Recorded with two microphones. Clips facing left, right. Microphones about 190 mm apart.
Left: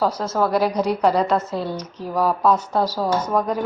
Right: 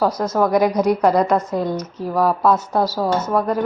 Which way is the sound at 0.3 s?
15° right (ahead or behind).